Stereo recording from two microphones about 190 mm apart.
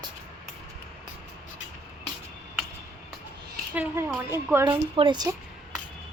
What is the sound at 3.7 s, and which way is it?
Speech, 10° right (ahead or behind).